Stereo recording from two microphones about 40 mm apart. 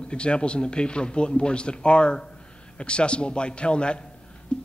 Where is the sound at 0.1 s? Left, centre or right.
Left.